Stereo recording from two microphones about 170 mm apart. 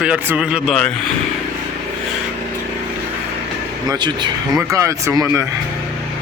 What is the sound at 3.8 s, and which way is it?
Speech, 25° right (ahead or behind).